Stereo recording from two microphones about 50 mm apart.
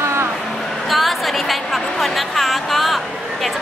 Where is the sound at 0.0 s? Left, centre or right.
Right.